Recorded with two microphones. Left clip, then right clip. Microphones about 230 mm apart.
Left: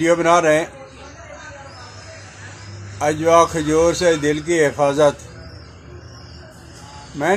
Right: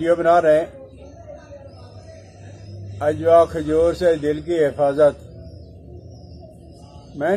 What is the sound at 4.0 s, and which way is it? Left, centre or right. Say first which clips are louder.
Speech: left 1 dB; left.